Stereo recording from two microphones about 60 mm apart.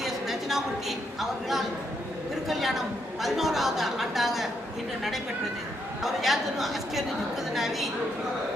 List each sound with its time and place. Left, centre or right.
0.0 s a sound: centre
2.5 s a woman's voice: centre
6.0 s a woman's voice: centre